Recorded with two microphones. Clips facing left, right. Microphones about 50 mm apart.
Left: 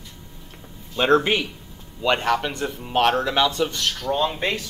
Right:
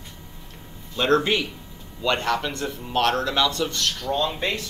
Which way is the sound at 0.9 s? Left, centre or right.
Centre.